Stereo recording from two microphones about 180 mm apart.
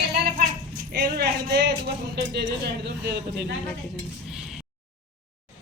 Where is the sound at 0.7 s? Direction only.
60° right (ahead or behind).